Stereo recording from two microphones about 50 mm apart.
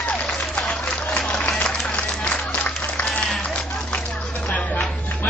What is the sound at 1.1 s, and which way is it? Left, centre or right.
Music, left.